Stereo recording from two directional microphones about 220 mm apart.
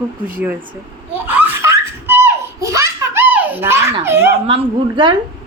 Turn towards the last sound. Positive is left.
turn(degrees=-25)  # may be behind; listen again after turning